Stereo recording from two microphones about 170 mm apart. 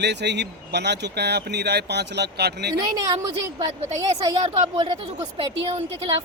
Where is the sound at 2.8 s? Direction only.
25° right (ahead or behind).